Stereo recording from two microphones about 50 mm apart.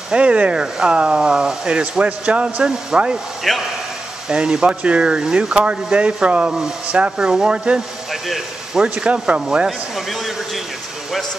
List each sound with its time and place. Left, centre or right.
0.1 s speech: right
3.5 s speech: centre
4.3 s speech: centre
9.7 s speech: centre